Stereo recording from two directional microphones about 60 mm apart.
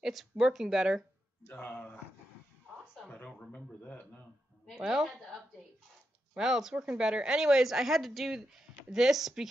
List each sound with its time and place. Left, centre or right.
0.0 s a woman's voice: centre
1.5 s speech: left
3.3 s a man's voice: left
4.7 s a woman's voice: centre